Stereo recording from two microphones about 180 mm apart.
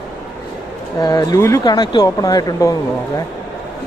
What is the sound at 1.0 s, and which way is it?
Speech, 20° left (ahead or behind).